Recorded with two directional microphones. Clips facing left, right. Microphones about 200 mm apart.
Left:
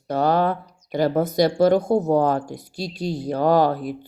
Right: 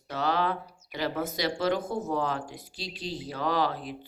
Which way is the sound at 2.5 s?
45° left (ahead or behind).